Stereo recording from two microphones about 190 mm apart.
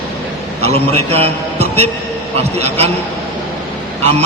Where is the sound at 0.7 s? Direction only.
35° right (ahead or behind).